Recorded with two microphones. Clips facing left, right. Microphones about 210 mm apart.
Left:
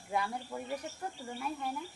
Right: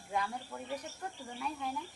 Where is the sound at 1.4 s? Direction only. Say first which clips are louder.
Left 1 dB; 5° left (ahead or behind).